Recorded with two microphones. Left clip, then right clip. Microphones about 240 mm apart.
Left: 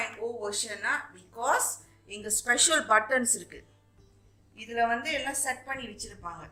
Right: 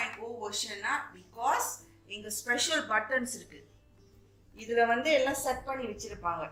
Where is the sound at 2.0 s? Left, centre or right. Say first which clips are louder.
Left 5 dB; left.